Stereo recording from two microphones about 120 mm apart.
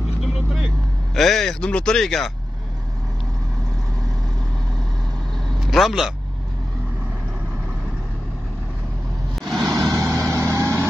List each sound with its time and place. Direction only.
1.1 s speech: centre (ahead or behind)
5.7 s speech: centre (ahead or behind)
9.3 s vehicle: centre (ahead or behind)
9.8 s vehicle: 25° right (ahead or behind)